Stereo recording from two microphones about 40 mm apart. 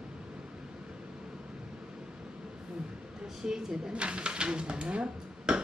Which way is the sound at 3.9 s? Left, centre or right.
Right.